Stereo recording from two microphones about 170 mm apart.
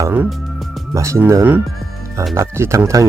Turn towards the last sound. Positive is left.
turn(degrees=-20)  # may be behind; listen again after turning